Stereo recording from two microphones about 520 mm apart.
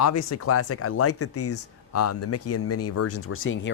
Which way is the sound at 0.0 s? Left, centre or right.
Left.